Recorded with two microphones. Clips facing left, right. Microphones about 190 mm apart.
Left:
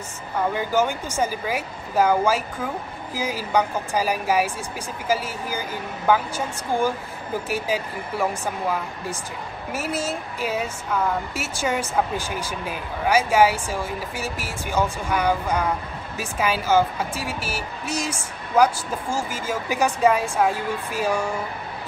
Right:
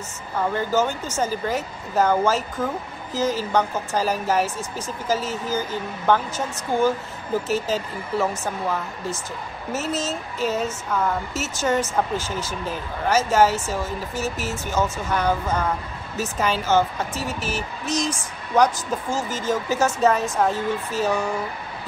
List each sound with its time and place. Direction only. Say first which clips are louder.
0.6 s speech: right 1 dB; 10° left (ahead or behind)